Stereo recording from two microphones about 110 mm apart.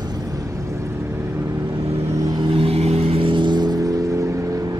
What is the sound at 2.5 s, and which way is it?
Vehicle, 65° right (ahead or behind).